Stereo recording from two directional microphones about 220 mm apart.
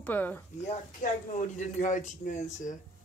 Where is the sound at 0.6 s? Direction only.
35° left (ahead or behind).